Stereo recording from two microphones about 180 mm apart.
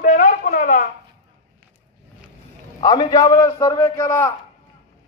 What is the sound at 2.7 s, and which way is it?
A man's voice, 20° left (ahead or behind).